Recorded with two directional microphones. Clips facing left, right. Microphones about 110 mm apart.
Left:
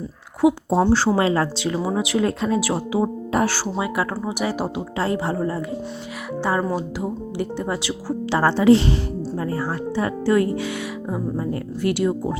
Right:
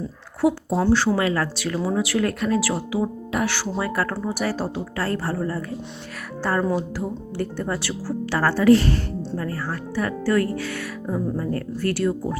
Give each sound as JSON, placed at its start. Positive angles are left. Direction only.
{"t": 0.7, "sound": "speech", "side_deg": 25}
{"t": 3.8, "sound": "speech", "side_deg": 15}